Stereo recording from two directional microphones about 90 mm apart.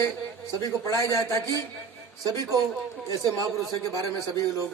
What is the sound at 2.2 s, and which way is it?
A man's voice, 45° right (ahead or behind).